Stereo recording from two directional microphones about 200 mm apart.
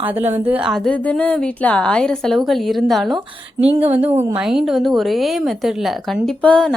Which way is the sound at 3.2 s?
30° right (ahead or behind).